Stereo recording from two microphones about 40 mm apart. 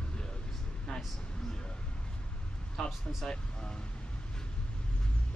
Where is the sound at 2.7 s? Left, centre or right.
Centre.